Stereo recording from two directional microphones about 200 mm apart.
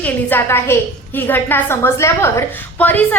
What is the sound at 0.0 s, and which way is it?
A woman's voice, 10° left (ahead or behind).